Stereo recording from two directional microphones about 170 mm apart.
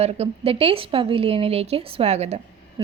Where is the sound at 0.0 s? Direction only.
35° right (ahead or behind).